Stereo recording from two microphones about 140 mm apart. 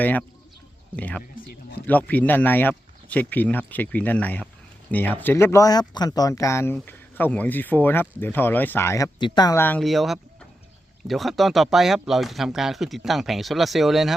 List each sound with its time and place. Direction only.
0.0 s speech: 10° left (ahead or behind)
9.1 s speech: 30° left (ahead or behind)
9.6 s speech: 15° left (ahead or behind)
9.8 s speech: centre (ahead or behind)